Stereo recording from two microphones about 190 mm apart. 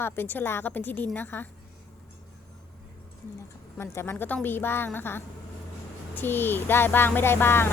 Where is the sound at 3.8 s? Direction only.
15° left (ahead or behind).